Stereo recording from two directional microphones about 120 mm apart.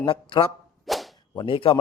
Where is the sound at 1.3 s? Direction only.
45° left (ahead or behind).